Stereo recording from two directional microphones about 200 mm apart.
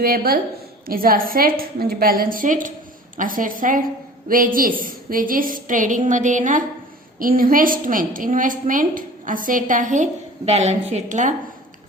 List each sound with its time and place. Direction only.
0.0 s a woman's voice: 50° right (ahead or behind)